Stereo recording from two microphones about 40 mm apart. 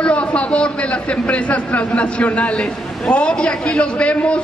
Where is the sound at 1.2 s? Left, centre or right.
Left.